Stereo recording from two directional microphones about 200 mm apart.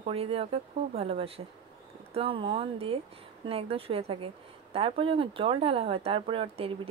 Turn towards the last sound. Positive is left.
turn(degrees=-25)  # may be behind; listen again after turning